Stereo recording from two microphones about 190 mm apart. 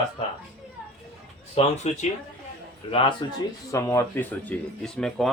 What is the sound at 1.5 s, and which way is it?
Speech, 35° left (ahead or behind).